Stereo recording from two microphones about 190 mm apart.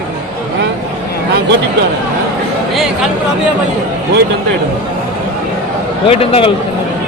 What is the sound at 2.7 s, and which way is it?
Speech, centre (ahead or behind).